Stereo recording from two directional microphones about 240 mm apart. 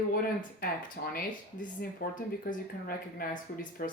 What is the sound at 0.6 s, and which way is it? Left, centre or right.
Speech, left.